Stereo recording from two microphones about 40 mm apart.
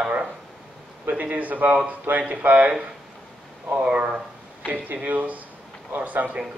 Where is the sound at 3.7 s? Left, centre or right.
Right.